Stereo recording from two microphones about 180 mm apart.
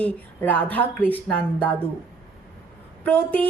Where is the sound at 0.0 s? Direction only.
10° left (ahead or behind).